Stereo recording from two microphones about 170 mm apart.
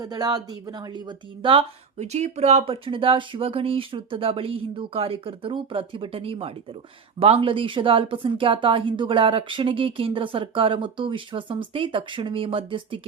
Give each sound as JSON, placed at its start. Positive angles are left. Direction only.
{"t": 0.0, "sound": "speech", "side_deg": -25}